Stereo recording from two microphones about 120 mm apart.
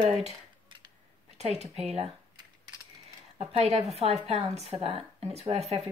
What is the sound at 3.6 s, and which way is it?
Speech, 65° right (ahead or behind).